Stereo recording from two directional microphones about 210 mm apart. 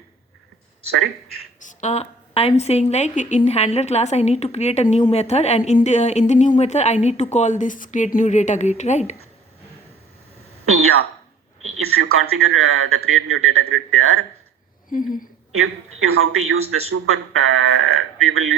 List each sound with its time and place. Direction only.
1.5 s a woman's voice: 35° left (ahead or behind)
10.7 s a woman's voice: 90° right
14.8 s speech: 40° left (ahead or behind)
15.5 s a woman's voice: 90° right
16.9 s speech: 80° right